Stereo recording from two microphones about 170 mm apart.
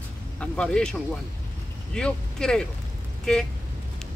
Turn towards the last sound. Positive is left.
turn(degrees=5)  # may be behind; listen again after turning